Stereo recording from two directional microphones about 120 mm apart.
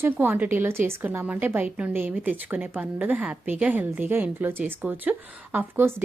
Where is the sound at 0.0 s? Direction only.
20° right (ahead or behind).